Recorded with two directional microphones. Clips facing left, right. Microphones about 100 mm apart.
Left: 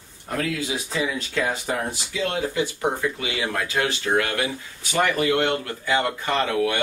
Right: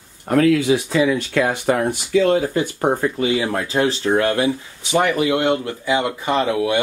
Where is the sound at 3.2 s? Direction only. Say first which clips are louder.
Right 7 dB; 30° right (ahead or behind).